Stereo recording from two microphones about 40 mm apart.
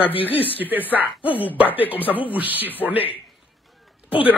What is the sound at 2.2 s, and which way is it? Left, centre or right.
Speech, right.